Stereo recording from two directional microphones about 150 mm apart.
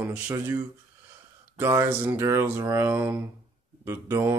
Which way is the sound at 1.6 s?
15° right (ahead or behind).